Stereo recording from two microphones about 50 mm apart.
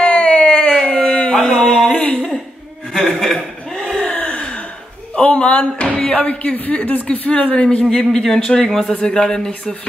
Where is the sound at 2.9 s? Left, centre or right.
Centre.